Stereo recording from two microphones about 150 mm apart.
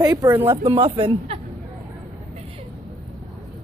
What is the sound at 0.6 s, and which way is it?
Speech, 35° right (ahead or behind).